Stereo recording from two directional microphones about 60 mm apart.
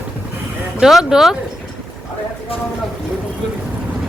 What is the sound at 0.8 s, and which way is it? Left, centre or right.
Speech, centre.